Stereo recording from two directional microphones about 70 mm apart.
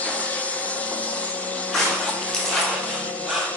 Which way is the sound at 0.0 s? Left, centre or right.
Left.